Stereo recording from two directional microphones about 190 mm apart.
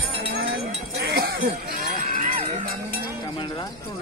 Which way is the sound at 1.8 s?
45° right (ahead or behind).